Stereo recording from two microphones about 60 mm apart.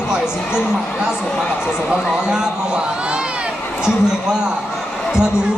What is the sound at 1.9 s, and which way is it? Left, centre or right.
Speech, centre.